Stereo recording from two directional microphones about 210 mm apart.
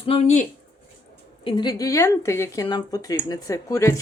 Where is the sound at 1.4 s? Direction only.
20° left (ahead or behind).